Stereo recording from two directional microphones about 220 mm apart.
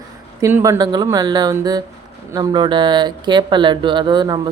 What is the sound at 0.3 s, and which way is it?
A woman's voice, 15° right (ahead or behind).